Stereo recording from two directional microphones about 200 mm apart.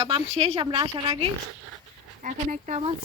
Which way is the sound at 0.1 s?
30° right (ahead or behind).